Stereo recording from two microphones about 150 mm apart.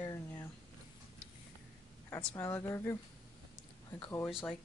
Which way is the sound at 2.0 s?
20° left (ahead or behind).